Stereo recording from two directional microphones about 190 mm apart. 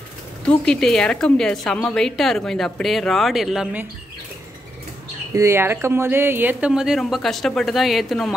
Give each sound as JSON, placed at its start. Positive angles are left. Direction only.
{"t": 0.5, "sound": "a woman's voice", "side_deg": 5}
{"t": 5.3, "sound": "a woman's voice", "side_deg": -15}